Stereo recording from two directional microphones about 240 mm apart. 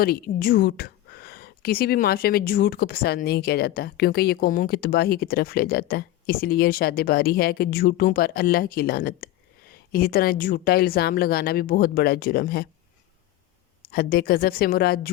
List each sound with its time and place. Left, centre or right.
0.0 s a woman's voice: left
13.9 s a woman's voice: left